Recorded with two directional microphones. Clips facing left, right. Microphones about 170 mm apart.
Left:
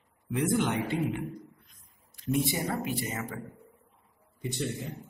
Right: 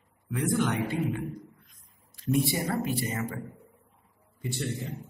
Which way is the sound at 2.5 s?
20° left (ahead or behind).